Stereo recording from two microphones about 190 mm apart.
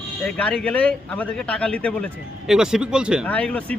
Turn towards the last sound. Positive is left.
turn(degrees=5)  # may be behind; listen again after turning